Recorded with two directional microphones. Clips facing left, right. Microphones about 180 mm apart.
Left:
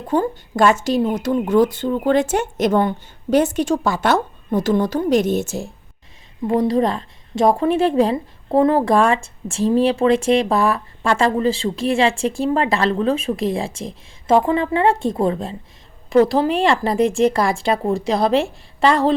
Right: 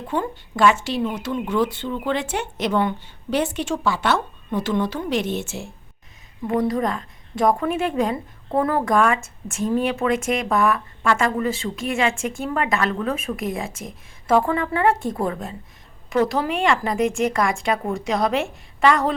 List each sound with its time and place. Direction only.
0.1 s a woman's voice: 40° left (ahead or behind)
6.5 s a woman's voice: 25° left (ahead or behind)